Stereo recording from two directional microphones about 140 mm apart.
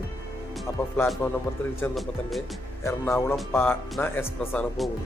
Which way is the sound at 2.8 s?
20° left (ahead or behind).